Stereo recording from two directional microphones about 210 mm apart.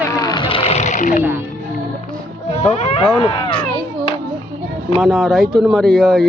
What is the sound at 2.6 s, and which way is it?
Speech, 35° left (ahead or behind).